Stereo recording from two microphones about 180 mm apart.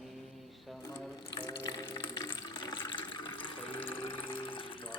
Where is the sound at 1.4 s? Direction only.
25° left (ahead or behind).